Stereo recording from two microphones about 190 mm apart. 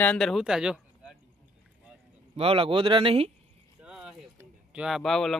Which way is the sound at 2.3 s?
30° right (ahead or behind).